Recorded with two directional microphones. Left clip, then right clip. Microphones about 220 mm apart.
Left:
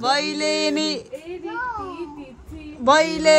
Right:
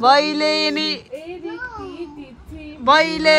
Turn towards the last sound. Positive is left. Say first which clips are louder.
# right 2 dB
turn(degrees=15)  # may be behind; listen again after turning